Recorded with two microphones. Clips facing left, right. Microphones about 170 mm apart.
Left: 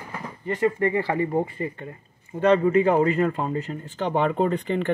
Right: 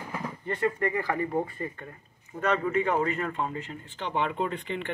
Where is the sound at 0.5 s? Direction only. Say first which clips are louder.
Left 6 dB; 20° left (ahead or behind).